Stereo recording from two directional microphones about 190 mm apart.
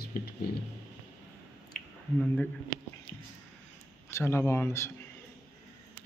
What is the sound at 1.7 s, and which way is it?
Squish, 50° left (ahead or behind).